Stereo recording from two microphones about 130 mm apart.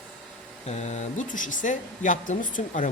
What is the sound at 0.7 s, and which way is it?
Speech, 60° left (ahead or behind).